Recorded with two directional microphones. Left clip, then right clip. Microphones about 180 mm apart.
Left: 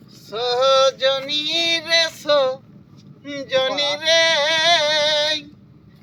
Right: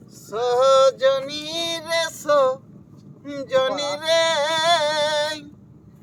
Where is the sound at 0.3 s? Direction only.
25° right (ahead or behind).